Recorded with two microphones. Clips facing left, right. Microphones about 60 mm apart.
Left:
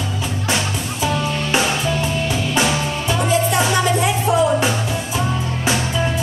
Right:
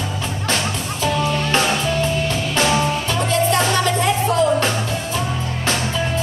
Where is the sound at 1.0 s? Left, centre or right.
Centre.